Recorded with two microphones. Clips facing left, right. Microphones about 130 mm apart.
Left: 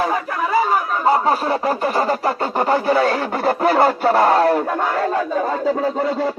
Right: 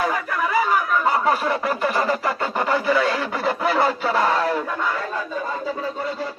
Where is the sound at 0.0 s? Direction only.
30° left (ahead or behind).